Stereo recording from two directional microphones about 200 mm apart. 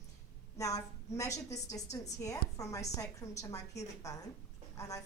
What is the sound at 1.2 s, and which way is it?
A woman's voice, 15° left (ahead or behind).